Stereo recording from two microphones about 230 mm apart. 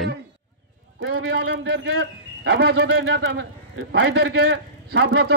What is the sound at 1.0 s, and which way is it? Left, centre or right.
A man's voice, right.